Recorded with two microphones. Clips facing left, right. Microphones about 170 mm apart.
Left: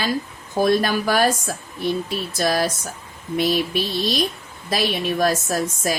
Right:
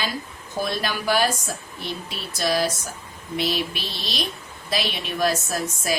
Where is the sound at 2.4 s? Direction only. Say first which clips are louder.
Left 1 dB; 50° left (ahead or behind).